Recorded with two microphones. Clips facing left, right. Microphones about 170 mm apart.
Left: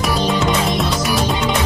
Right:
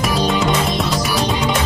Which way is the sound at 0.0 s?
Centre (ahead or behind).